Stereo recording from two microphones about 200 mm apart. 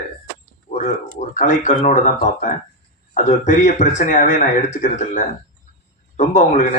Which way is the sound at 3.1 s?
40° left (ahead or behind).